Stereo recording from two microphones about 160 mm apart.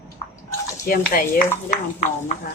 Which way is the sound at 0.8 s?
60° left (ahead or behind).